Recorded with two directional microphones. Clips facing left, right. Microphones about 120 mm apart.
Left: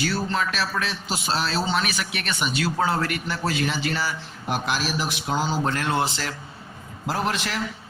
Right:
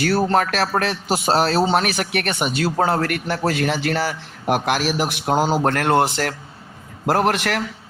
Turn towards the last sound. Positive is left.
turn(degrees=-65)  # may be behind; listen again after turning